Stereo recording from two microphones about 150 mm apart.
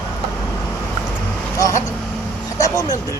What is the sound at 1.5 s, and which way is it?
Speech, 20° left (ahead or behind).